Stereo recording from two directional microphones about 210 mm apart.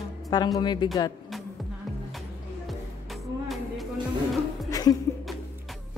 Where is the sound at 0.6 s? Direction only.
20° left (ahead or behind).